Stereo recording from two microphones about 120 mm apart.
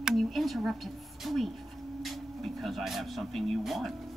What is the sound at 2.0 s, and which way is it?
Speech, centre (ahead or behind).